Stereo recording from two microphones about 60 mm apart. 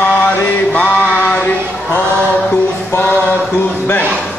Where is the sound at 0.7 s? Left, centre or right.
Centre.